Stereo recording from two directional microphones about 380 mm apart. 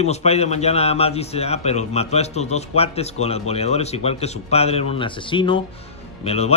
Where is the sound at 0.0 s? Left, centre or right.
Centre.